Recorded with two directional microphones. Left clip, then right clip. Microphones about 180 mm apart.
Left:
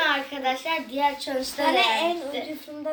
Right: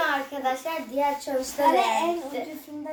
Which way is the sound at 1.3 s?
20° left (ahead or behind).